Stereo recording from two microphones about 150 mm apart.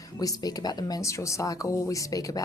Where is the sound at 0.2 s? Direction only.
25° left (ahead or behind).